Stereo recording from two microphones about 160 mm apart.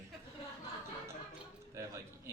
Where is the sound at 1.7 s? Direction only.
20° right (ahead or behind).